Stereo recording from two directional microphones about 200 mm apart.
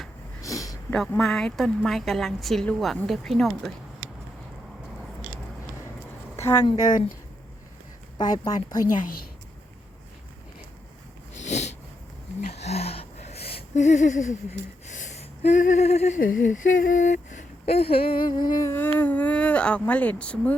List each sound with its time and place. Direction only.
0.4 s a sound: 15° left (ahead or behind)
0.9 s a woman's voice: centre (ahead or behind)
6.7 s a woman's voice: 20° left (ahead or behind)
8.2 s a woman's voice: 20° left (ahead or behind)
8.9 s a woman's voice: 45° left (ahead or behind)
11.3 s a sound: 35° left (ahead or behind)
14.8 s gasp: 40° left (ahead or behind)
16.3 s a sound: 40° left (ahead or behind); by 18.3 s 25° left (ahead or behind)
18.4 s speech: 20° left (ahead or behind)